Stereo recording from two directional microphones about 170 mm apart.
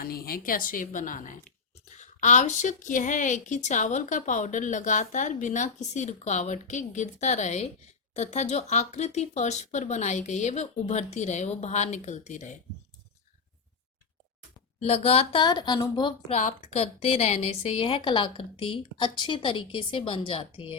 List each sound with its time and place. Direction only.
0.0 s a woman's voice: 60° left (ahead or behind); by 12.5 s 45° left (ahead or behind)
14.8 s a woman's voice: 35° left (ahead or behind)
16.3 s a woman's voice: 45° left (ahead or behind)